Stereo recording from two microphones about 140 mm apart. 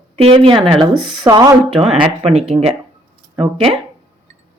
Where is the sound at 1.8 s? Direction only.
45° right (ahead or behind).